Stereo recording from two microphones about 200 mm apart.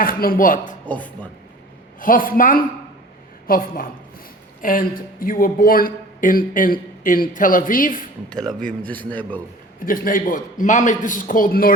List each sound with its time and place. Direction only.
0.0 s speech: 45° left (ahead or behind)
0.9 s a man's voice: 5° left (ahead or behind)
2.0 s a woman's voice: 45° left (ahead or behind)
8.9 s a man's voice: 10° left (ahead or behind)
9.8 s speech: 45° left (ahead or behind)